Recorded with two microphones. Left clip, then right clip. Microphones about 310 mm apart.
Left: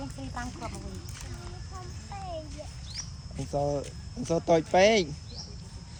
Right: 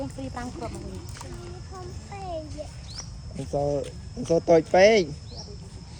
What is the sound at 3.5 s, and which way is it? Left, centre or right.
Speech, centre.